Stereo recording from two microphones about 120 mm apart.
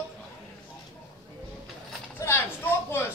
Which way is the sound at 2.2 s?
20° left (ahead or behind).